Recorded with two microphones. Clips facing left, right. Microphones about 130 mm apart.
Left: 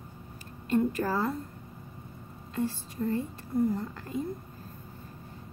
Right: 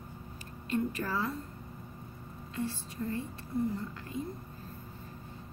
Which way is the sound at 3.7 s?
45° left (ahead or behind).